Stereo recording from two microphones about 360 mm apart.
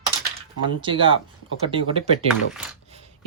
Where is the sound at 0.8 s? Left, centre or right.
Centre.